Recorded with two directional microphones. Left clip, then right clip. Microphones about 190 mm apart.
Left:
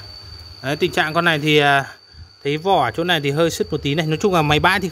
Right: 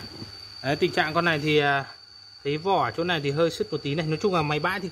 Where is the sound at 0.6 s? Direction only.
20° left (ahead or behind).